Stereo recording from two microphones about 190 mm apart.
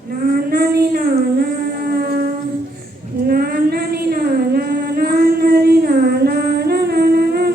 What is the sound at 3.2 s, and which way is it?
Female singing, 50° right (ahead or behind).